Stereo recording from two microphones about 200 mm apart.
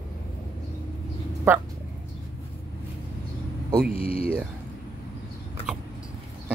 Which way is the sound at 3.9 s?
45° right (ahead or behind).